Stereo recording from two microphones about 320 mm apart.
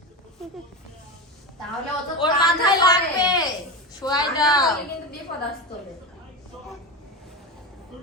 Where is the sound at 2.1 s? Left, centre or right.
Centre.